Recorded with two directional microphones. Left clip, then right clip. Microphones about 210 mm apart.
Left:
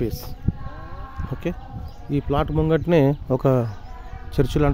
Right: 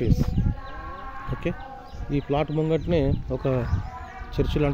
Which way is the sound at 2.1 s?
25° left (ahead or behind).